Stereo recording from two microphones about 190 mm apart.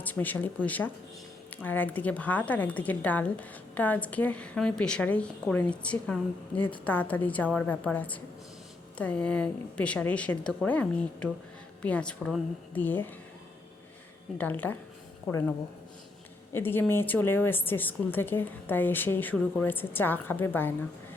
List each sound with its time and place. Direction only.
0.0 s speech: 10° left (ahead or behind)
14.3 s speech: 10° left (ahead or behind)